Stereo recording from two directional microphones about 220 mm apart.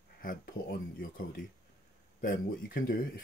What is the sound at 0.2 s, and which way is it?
Speech, 40° left (ahead or behind).